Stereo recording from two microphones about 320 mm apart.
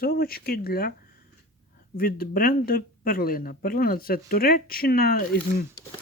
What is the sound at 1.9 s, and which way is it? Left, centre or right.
Speech, left.